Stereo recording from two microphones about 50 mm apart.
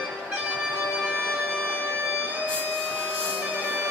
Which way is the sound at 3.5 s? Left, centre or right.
Right.